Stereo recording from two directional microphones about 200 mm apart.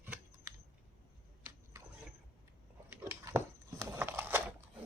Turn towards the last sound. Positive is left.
turn(degrees=-10)  # may be behind; listen again after turning